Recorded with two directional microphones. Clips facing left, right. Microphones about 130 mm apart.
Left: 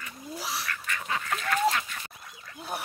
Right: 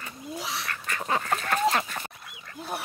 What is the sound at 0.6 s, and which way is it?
Duck, 35° right (ahead or behind).